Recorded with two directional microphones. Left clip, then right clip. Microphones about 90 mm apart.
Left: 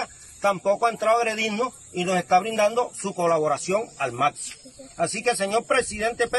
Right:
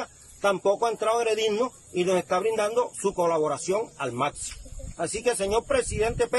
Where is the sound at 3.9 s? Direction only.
30° right (ahead or behind).